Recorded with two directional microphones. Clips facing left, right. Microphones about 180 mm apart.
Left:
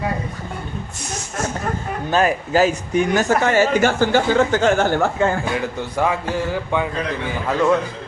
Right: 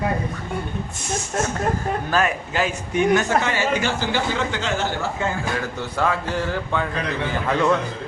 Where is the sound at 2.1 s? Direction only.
30° left (ahead or behind); by 5.3 s 55° left (ahead or behind).